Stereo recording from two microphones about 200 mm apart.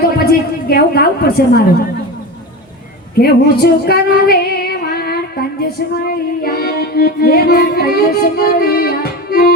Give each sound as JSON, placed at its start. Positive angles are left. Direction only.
{"t": 0.0, "sound": "a woman's voice", "side_deg": 50}
{"t": 3.2, "sound": "female singing", "side_deg": 50}